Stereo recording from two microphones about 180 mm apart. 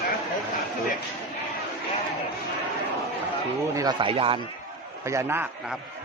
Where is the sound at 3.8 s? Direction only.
25° right (ahead or behind).